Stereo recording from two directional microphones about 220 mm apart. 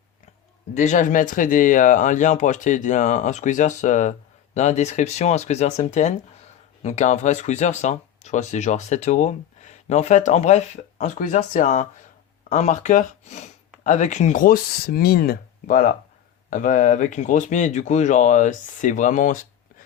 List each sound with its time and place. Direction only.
0.7 s speech: 35° left (ahead or behind)